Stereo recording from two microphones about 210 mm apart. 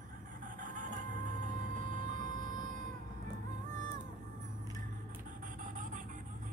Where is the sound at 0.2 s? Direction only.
40° right (ahead or behind).